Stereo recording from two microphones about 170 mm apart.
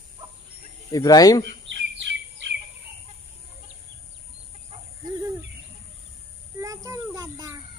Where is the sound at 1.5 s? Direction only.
90° right.